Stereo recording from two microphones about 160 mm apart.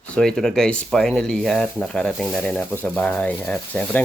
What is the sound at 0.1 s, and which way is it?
Speech, 5° left (ahead or behind).